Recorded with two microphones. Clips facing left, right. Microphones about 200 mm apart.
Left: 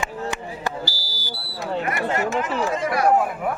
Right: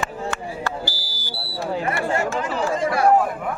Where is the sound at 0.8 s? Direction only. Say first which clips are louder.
Right 1 dB; 50° right (ahead or behind).